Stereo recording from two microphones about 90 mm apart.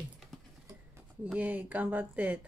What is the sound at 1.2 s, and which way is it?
Speech, 15° right (ahead or behind).